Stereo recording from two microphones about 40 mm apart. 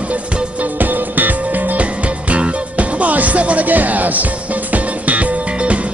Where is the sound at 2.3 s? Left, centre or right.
Right.